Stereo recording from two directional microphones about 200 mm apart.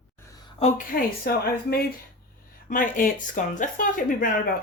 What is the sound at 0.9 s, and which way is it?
Speech, 50° left (ahead or behind).